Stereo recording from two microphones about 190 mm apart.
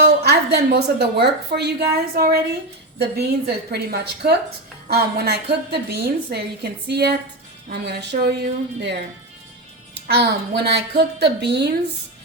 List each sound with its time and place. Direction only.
0.0 s a woman's voice: 60° right (ahead or behind)
10.1 s a woman's voice: 55° right (ahead or behind)